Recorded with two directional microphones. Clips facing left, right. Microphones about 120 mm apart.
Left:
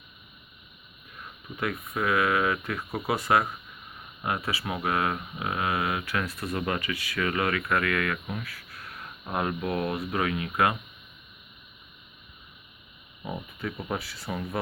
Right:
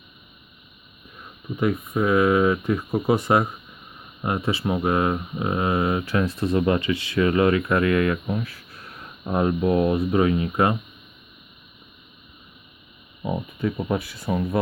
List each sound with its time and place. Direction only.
1.5 s speech: 20° right (ahead or behind)
14.0 s speech: 15° right (ahead or behind)
14.3 s speech: 45° right (ahead or behind)